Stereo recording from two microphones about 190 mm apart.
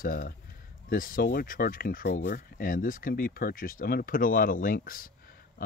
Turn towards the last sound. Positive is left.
turn(degrees=50)  # may be behind; listen again after turning